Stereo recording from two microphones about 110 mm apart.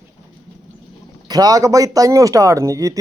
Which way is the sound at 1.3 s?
35° right (ahead or behind).